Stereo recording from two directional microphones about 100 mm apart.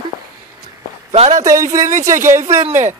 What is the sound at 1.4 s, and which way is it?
Speech, 35° right (ahead or behind).